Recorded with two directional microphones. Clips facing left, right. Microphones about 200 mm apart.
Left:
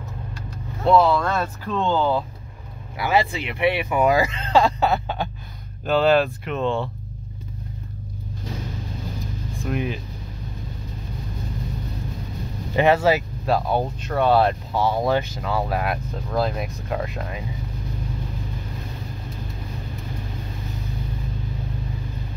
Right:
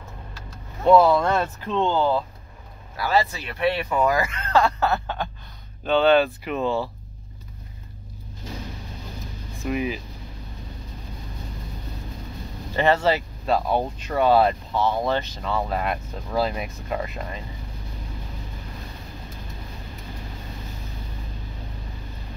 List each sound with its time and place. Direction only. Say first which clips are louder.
0.8 s speech: right 1 dB; 10° right (ahead or behind)
1.1 s speech: right 2 dB; 20° right (ahead or behind)
2.0 s speech: left 1 dB; 5° right (ahead or behind)
3.0 s speech: left 1 dB; 15° left (ahead or behind)
5.9 s speech: even; centre (ahead or behind)
9.5 s speech: right 1 dB; centre (ahead or behind)
12.7 s speech: left 3 dB; 10° left (ahead or behind)
14.7 s speech: left 2 dB; 10° left (ahead or behind)